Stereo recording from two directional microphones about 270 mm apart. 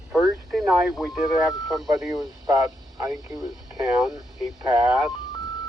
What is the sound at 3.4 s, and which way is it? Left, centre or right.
Speech, centre.